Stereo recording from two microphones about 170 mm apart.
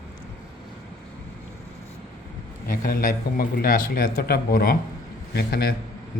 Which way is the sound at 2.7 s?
55° left (ahead or behind).